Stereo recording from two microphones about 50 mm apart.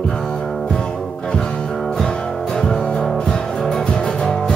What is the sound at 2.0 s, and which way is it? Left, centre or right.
Music, centre.